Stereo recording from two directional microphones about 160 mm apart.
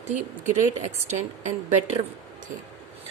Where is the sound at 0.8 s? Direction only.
45° right (ahead or behind).